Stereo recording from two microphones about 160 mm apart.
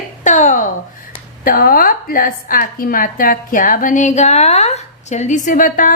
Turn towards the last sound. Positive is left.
turn(degrees=55)  # may be behind; listen again after turning